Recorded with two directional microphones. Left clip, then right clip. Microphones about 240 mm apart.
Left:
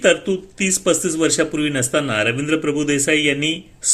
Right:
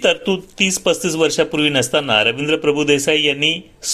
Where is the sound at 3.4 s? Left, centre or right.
Centre.